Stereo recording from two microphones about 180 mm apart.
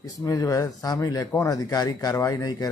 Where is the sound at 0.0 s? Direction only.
20° left (ahead or behind).